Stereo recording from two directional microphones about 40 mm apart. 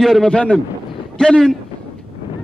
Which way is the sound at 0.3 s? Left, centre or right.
Left.